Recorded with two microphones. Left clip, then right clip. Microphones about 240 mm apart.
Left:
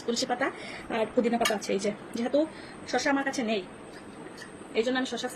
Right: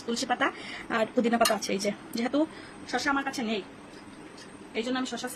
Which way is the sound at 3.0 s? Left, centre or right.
Centre.